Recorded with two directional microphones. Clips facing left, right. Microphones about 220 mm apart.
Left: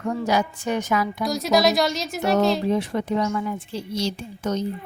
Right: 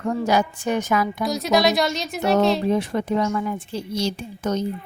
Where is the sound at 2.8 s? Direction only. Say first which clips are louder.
Right 1 dB; 50° right (ahead or behind).